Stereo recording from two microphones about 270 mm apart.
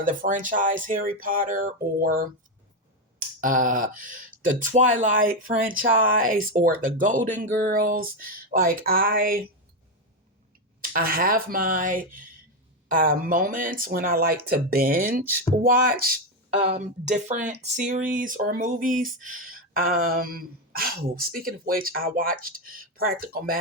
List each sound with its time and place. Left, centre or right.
0.0 s speech: right
10.8 s speech: right